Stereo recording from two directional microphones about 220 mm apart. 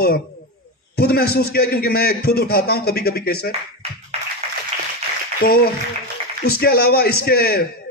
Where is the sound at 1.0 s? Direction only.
45° left (ahead or behind).